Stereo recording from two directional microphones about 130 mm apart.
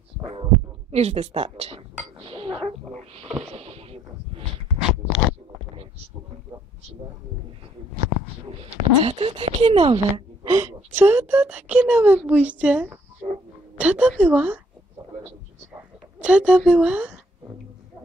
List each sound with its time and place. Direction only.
0.2 s heart sounds: 45° right (ahead or behind)
0.9 s speech: 55° right (ahead or behind)
2.2 s chink: 45° right (ahead or behind)
2.9 s a sound: 50° right (ahead or behind)
4.8 s crunch: centre (ahead or behind)
8.6 s speech: 50° right (ahead or behind)
10.5 s speech: 20° right (ahead or behind)
16.2 s speech: 10° right (ahead or behind)